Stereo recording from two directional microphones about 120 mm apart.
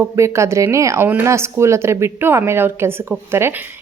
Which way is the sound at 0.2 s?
25° right (ahead or behind).